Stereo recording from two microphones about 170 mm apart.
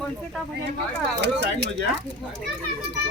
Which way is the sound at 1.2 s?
90° right.